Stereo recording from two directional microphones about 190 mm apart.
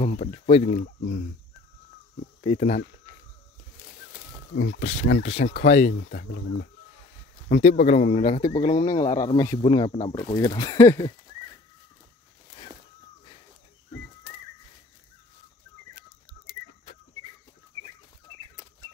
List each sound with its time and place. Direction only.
0.0 s speech: 35° left (ahead or behind)
0.7 s speech: 55° left (ahead or behind)
2.4 s speech: 40° left (ahead or behind)
4.6 s speech: 50° left (ahead or behind)
5.0 s speech: 75° left (ahead or behind)
5.4 s speech: 60° left (ahead or behind)
7.6 s speech: 35° left (ahead or behind); by 11.1 s 15° left (ahead or behind)